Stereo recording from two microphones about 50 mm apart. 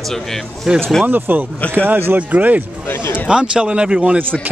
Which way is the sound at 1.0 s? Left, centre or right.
Right.